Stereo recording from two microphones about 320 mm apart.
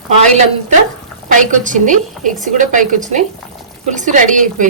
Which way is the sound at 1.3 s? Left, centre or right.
Right.